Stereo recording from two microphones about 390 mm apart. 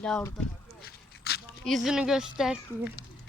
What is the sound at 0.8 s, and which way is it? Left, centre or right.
Walk, left.